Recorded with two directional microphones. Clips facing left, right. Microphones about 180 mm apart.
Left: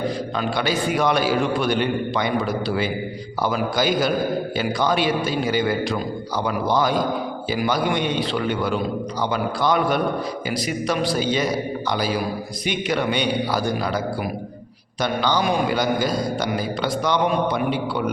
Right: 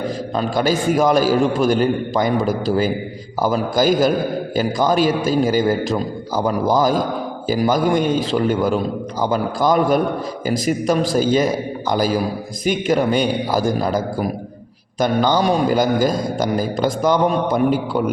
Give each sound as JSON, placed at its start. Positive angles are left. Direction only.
{"t": 0.3, "sound": "a man's voice", "side_deg": -40}